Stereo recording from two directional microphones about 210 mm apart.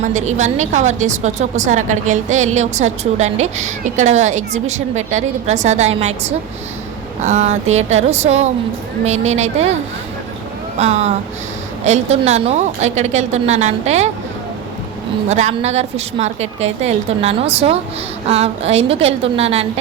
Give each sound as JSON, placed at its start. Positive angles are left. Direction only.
{"t": 0.0, "sound": "a woman's voice", "side_deg": -35}
{"t": 10.8, "sound": "a woman's voice", "side_deg": -30}
{"t": 15.3, "sound": "a woman's voice", "side_deg": -30}